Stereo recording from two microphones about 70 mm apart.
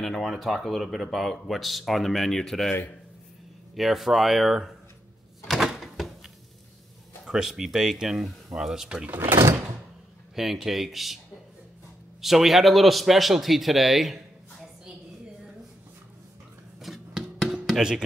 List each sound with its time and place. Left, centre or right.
0.0 s speech: centre
3.7 s speech: centre
5.5 s door: centre
7.2 s speech: centre
9.0 s speech: right
9.3 s door: right
10.3 s speech: centre
12.2 s speech: centre
16.8 s music: centre
17.6 s speech: centre